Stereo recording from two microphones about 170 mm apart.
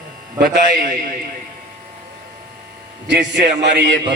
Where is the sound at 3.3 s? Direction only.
90° right.